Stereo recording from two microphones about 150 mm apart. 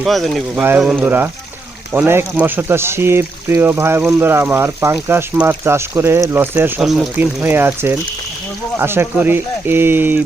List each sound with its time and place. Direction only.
0.0 s speech: centre (ahead or behind)
7.2 s speech: 10° right (ahead or behind)